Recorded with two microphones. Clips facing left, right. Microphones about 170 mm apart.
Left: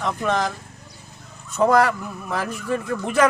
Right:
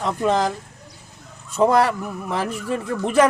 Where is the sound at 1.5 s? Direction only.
30° right (ahead or behind).